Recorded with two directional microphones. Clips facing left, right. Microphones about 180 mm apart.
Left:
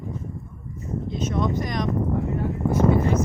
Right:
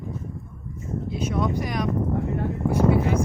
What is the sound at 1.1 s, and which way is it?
Vehicle, 10° right (ahead or behind).